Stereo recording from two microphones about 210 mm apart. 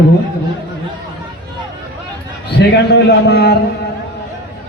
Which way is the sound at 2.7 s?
50° left (ahead or behind).